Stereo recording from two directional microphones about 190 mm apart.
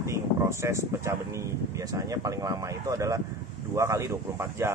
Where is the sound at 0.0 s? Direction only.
15° right (ahead or behind).